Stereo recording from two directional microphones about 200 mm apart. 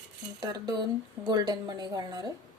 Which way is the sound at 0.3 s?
20° right (ahead or behind).